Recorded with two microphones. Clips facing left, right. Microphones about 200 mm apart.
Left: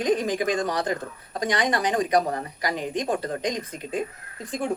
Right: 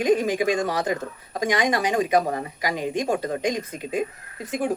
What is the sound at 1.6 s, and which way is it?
Speech, 10° right (ahead or behind).